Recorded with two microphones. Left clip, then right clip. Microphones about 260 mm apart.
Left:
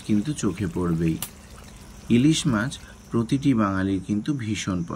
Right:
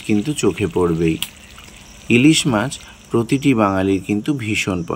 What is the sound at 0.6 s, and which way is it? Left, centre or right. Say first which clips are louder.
Speech: right 10 dB; right.